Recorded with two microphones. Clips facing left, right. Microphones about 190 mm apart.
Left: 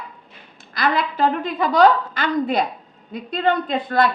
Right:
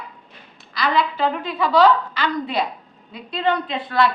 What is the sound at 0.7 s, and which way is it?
A woman's voice, 50° left (ahead or behind).